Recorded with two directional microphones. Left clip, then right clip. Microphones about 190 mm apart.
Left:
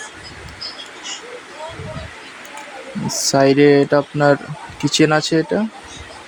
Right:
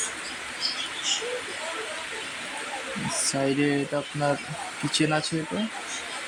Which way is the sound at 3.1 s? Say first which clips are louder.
Left 13 dB; 25° left (ahead or behind).